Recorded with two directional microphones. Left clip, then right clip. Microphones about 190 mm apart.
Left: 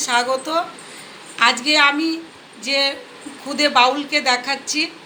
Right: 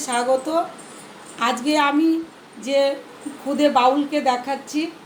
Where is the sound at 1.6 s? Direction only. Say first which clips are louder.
Left 3 dB; 45° right (ahead or behind).